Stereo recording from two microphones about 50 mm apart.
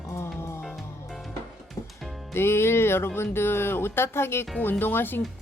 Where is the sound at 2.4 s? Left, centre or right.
Left.